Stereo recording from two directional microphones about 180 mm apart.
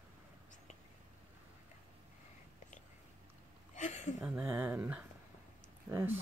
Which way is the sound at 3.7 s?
40° left (ahead or behind).